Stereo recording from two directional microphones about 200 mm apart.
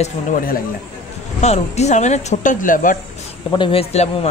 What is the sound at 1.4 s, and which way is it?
Speech, 35° left (ahead or behind).